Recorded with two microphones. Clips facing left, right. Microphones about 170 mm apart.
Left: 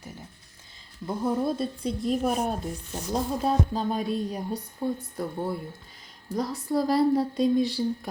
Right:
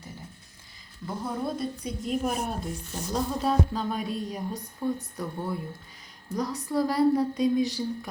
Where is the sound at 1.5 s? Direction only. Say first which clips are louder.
Left 3 dB; 30° left (ahead or behind).